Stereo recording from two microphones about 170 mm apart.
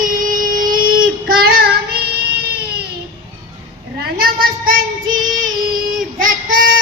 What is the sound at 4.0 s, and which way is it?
Child singing, 60° right (ahead or behind).